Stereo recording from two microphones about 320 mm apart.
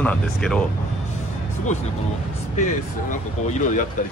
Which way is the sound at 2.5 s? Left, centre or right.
Left.